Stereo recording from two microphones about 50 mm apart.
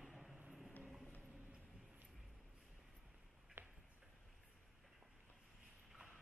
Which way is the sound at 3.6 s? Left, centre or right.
Right.